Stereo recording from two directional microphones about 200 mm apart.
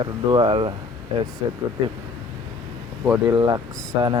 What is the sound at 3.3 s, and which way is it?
Speech, 20° right (ahead or behind).